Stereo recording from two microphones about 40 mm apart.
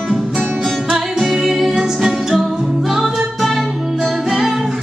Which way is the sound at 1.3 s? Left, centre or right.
Centre.